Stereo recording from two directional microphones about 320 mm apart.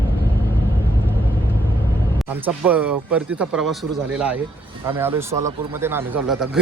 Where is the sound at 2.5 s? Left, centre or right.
Centre.